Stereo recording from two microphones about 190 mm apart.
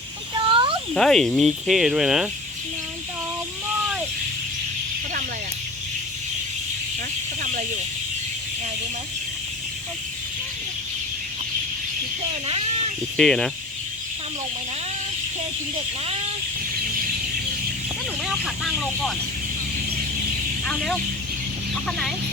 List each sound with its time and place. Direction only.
0.4 s a sound: 25° right (ahead or behind)
0.9 s speech: centre (ahead or behind)
12.5 s a sound: 35° right (ahead or behind)
13.1 s speech: 5° left (ahead or behind)
18.4 s speech: centre (ahead or behind)
20.7 s speech: 5° left (ahead or behind)